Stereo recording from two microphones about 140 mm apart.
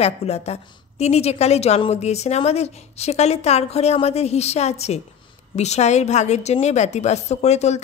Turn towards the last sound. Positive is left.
turn(degrees=55)  # may be behind; listen again after turning